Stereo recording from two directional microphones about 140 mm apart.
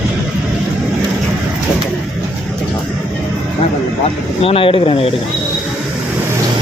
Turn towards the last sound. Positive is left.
turn(degrees=40)  # may be behind; listen again after turning